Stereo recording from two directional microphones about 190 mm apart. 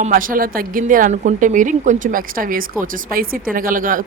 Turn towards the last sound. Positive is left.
turn(degrees=-45)  # may be behind; listen again after turning